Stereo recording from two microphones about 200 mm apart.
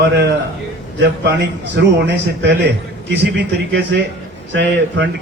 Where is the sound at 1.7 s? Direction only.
60° right (ahead or behind).